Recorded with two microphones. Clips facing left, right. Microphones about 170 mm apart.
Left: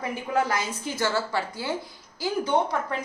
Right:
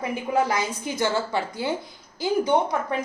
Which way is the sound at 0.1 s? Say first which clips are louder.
Right 2 dB; 15° right (ahead or behind).